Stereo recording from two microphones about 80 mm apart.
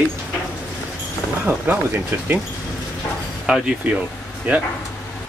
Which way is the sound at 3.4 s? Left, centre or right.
Centre.